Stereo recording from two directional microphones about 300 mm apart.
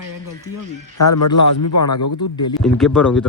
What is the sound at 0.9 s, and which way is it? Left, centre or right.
A man's voice, left.